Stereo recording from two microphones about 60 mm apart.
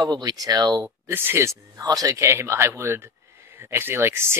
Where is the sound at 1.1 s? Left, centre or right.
Right.